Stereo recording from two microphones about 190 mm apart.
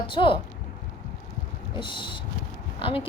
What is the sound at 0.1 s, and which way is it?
Speech, 25° left (ahead or behind).